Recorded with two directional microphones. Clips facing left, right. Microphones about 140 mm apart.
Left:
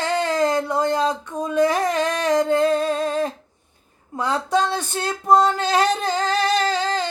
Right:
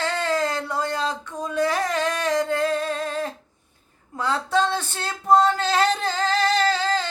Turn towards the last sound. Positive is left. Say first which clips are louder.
# left 1 dB
turn(degrees=20)  # may be behind; listen again after turning